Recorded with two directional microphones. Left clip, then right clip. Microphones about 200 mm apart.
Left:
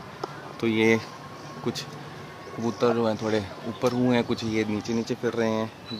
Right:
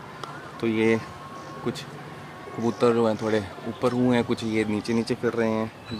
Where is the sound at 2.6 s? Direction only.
10° right (ahead or behind).